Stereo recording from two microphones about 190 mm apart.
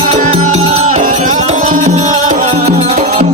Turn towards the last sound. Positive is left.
turn(degrees=-40)  # may be behind; listen again after turning